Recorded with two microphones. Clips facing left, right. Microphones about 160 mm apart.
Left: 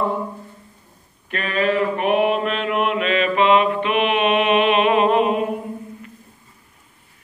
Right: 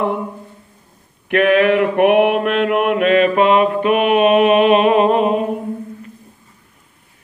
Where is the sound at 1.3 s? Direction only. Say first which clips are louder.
Right 8 dB; 65° right (ahead or behind); by 5.5 s 40° right (ahead or behind).